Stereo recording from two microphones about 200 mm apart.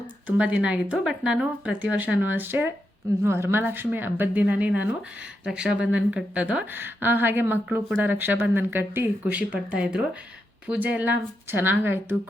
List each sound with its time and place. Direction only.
0.3 s a woman's voice: 5° right (ahead or behind)